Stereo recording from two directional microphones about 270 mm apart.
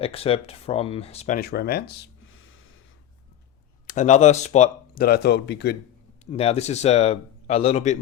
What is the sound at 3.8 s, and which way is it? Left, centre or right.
Speech, left.